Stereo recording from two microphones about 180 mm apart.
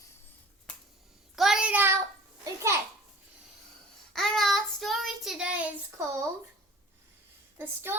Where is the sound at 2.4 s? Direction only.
15° right (ahead or behind).